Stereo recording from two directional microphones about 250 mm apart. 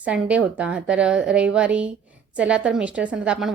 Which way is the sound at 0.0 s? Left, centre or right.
Centre.